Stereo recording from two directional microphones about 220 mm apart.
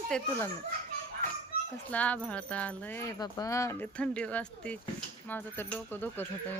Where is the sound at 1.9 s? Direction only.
5° left (ahead or behind).